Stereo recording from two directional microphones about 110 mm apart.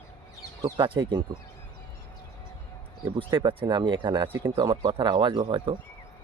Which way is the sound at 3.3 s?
45° right (ahead or behind).